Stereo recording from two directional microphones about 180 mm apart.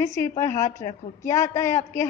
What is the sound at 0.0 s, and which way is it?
A woman's voice, 15° left (ahead or behind).